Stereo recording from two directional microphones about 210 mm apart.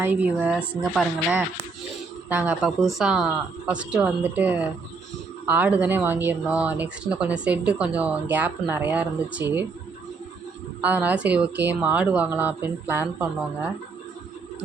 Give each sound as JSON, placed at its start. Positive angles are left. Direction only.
{"t": 0.0, "sound": "speech", "side_deg": -10}
{"t": 10.8, "sound": "speech", "side_deg": -10}